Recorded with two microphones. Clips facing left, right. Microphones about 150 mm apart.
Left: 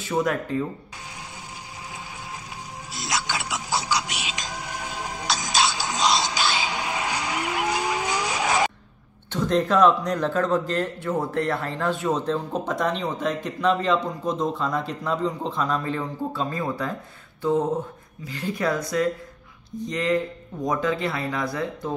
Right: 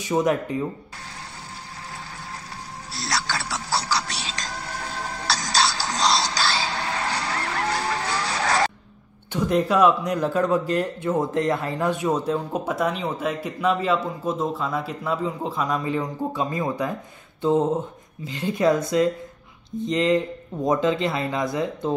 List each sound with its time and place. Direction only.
0.0 s a man's voice: 20° right (ahead or behind)
2.9 s music: 15° left (ahead or behind)
9.3 s a man's voice: 10° right (ahead or behind)
17.4 s a sound: 25° right (ahead or behind)
18.2 s speech: 20° right (ahead or behind)